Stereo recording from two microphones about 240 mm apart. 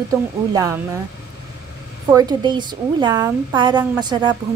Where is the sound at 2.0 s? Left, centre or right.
Centre.